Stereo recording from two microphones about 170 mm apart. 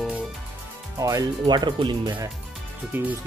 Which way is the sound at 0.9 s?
20° right (ahead or behind).